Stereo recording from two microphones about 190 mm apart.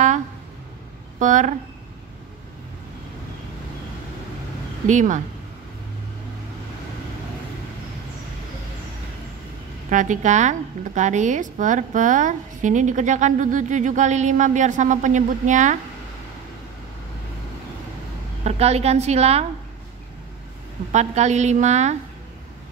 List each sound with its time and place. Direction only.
1.2 s a woman's voice: 40° right (ahead or behind)
4.8 s a woman's voice: 40° right (ahead or behind)
9.8 s a woman's voice: 40° right (ahead or behind)
18.4 s a woman's voice: 35° right (ahead or behind)
20.9 s a woman's voice: 35° right (ahead or behind)